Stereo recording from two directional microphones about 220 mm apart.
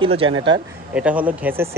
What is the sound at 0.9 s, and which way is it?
Speech, 5° right (ahead or behind).